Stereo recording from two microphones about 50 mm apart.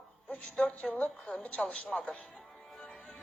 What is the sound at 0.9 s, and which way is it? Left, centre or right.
Speech, left.